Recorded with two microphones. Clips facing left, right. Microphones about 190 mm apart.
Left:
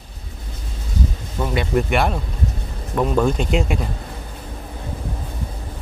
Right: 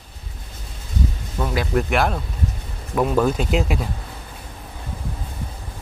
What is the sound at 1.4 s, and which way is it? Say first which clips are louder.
Speech: left 1 dB; centre (ahead or behind).